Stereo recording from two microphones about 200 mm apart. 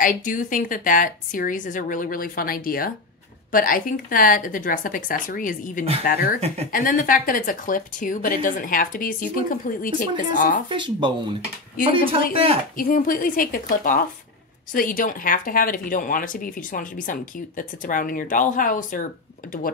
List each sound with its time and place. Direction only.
0.0 s speech: 40° left (ahead or behind)
6.4 s speech: 30° right (ahead or behind)
6.7 s speech: 45° left (ahead or behind)
10.7 s speech: 25° right (ahead or behind)
12.3 s speech: 30° right (ahead or behind)
12.7 s speech: 45° left (ahead or behind)